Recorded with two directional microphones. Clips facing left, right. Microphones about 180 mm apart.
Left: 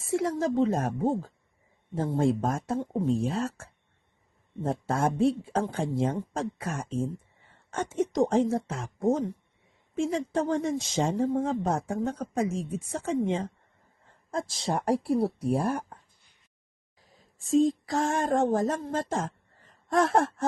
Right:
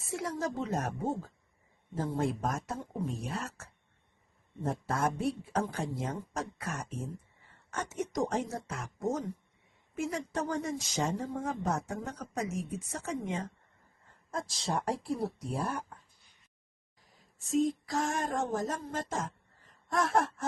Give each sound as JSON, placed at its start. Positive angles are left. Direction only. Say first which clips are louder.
{"t": 0.0, "sound": "speech", "louder": "left 8 dB", "side_deg": 25}
{"t": 15.9, "sound": "a sound", "louder": "left 3 dB", "side_deg": 30}
{"t": 17.3, "sound": "speech", "louder": "left 6 dB", "side_deg": 30}